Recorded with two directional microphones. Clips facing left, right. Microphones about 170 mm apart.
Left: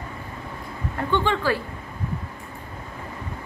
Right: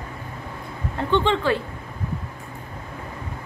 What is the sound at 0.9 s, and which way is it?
Speech, 20° right (ahead or behind).